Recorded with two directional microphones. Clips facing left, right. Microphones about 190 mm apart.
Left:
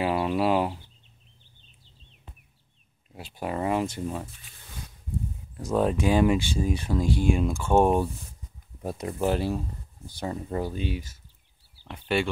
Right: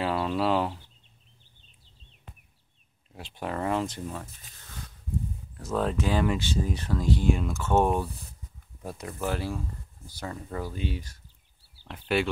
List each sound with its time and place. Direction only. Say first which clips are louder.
0.0 s a sound: left 2 dB; 10° left (ahead or behind)
3.2 s speech: left 2 dB; 10° left (ahead or behind)
5.6 s speech: left 4 dB; 15° left (ahead or behind)
11.9 s speech: even; centre (ahead or behind)